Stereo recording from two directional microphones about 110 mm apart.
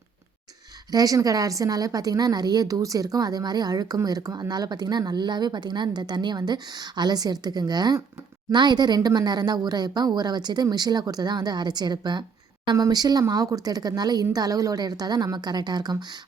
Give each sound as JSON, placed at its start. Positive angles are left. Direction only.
{"t": 0.9, "sound": "a woman's voice", "side_deg": -35}